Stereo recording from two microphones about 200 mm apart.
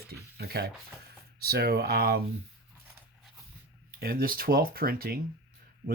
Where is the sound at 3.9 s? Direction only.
45° right (ahead or behind).